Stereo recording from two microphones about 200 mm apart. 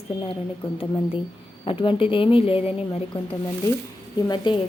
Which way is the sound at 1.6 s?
25° left (ahead or behind).